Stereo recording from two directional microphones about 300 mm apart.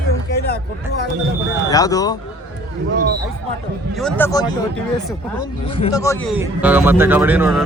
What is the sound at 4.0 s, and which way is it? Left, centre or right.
Speech, centre.